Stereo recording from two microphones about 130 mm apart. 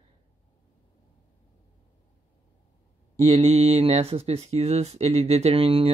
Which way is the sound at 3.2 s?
50° right (ahead or behind).